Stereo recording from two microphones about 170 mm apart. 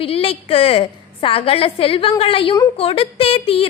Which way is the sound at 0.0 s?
35° left (ahead or behind).